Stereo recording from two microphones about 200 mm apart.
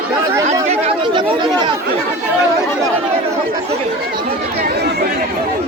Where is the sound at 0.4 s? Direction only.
30° right (ahead or behind).